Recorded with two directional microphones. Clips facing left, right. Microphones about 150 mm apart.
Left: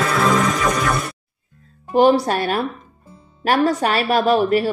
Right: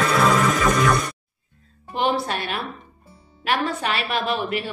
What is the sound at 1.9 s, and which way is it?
A woman's voice, 40° left (ahead or behind).